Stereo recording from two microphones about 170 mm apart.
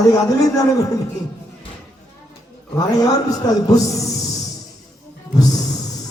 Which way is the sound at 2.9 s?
20° left (ahead or behind).